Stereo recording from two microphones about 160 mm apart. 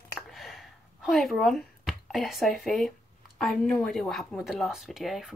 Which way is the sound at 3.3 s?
Centre (ahead or behind).